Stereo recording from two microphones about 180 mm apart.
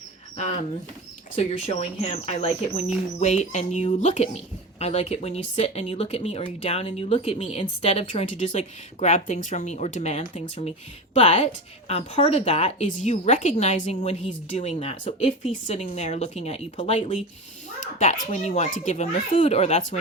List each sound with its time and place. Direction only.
1.4 s speech: 40° left (ahead or behind)